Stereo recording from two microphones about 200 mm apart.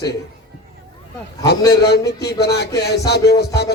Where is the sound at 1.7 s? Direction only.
55° left (ahead or behind).